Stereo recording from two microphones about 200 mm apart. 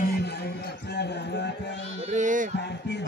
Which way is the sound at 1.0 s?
55° left (ahead or behind).